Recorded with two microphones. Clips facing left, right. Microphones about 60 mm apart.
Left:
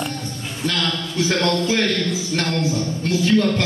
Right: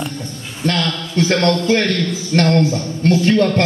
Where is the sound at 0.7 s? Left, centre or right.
Right.